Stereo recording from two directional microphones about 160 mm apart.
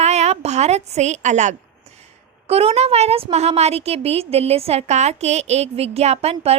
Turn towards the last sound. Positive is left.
turn(degrees=-40)  # may be behind; listen again after turning